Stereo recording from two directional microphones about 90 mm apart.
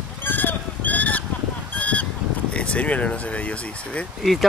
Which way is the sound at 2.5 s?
15° left (ahead or behind).